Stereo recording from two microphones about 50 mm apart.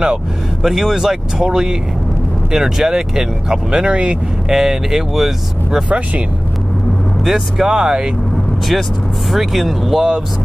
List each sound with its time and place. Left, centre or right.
0.0 s speech: centre
3.9 s speech: right
4.5 s speech: centre
5.9 s speech: right
7.2 s speech: centre
9.3 s speech: centre